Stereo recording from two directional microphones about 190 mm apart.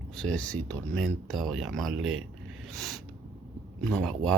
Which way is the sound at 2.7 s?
Centre (ahead or behind).